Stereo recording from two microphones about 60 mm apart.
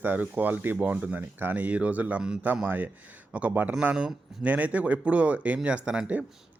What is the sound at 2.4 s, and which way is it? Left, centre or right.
Speech, right.